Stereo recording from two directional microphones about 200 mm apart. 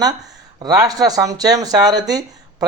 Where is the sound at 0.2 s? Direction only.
20° right (ahead or behind).